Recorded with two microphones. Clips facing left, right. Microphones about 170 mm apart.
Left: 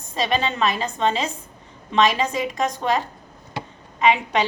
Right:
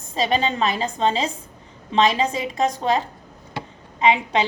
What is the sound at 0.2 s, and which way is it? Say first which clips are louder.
A woman's voice: right 1 dB; 25° right (ahead or behind).